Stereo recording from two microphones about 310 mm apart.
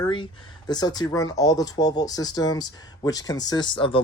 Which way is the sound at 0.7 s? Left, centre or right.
Centre.